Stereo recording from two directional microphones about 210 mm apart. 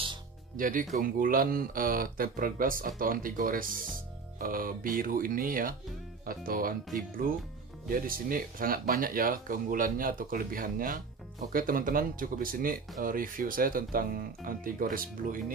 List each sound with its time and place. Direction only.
0.6 s speech: 40° right (ahead or behind)
7.9 s speech: 40° right (ahead or behind)